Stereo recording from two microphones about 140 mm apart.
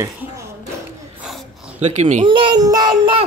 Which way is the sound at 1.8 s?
55° right (ahead or behind).